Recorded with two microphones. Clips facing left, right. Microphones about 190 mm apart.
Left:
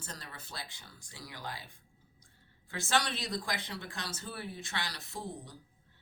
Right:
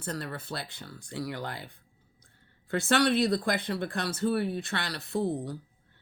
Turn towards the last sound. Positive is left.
turn(degrees=-60)  # may be behind; listen again after turning